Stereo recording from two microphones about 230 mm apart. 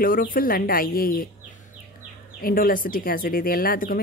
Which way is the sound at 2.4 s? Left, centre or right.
Left.